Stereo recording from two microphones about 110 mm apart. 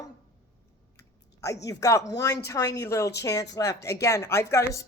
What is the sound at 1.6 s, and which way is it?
Speech, 30° left (ahead or behind).